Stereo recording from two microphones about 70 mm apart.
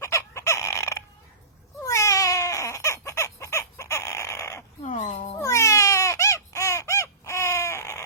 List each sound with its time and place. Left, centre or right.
0.0 s chicken: left
1.8 s cat: left
5.4 s a sound: left